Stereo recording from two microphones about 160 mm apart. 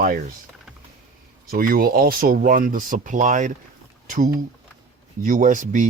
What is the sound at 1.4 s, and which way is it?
Speech, 65° right (ahead or behind).